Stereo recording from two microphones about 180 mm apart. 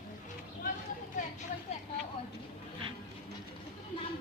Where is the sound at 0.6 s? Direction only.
45° left (ahead or behind).